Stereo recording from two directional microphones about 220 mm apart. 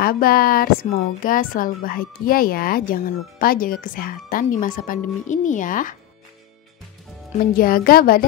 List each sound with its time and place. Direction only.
0.0 s speech: 45° left (ahead or behind)
7.5 s speech: 40° left (ahead or behind)